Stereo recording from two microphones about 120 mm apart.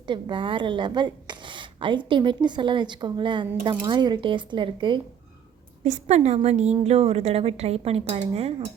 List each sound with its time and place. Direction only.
0.1 s a woman's voice: 40° right (ahead or behind)
5.8 s a woman's voice: 70° right (ahead or behind)